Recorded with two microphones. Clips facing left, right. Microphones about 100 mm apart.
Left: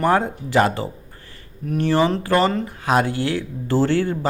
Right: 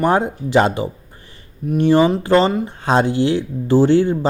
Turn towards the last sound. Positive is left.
turn(degrees=-20)  # may be behind; listen again after turning